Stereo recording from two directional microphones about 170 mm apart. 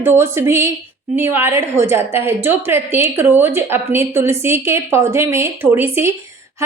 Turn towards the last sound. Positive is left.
turn(degrees=-10)  # may be behind; listen again after turning